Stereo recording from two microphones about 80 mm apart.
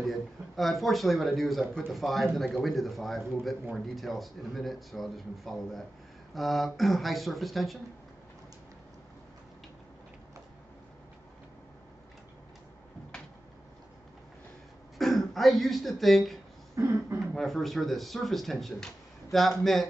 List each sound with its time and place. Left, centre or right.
0.0 s speech: centre
15.0 s speech: centre
16.7 s speech: right
17.2 s speech: centre